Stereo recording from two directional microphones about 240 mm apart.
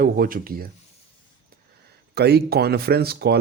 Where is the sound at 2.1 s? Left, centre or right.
Right.